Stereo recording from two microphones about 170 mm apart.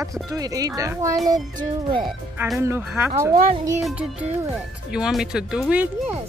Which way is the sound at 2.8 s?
5° right (ahead or behind).